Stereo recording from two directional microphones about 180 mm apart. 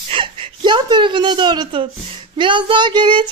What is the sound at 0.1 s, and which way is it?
A woman's voice, 30° right (ahead or behind).